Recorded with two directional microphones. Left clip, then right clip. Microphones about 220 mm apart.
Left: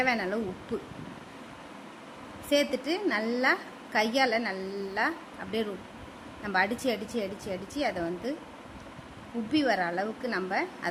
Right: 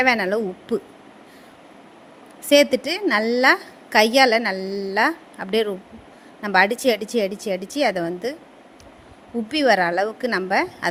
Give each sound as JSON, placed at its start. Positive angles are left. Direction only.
{"t": 0.0, "sound": "a woman's voice", "side_deg": -35}
{"t": 2.5, "sound": "a woman's voice", "side_deg": -35}
{"t": 9.5, "sound": "a woman's voice", "side_deg": -35}